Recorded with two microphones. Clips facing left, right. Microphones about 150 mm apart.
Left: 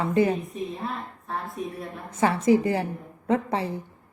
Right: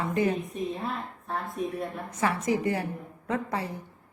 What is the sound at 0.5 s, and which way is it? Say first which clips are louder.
Speech: even; centre (ahead or behind).